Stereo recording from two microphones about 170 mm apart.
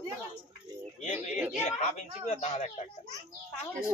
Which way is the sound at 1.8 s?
45° left (ahead or behind).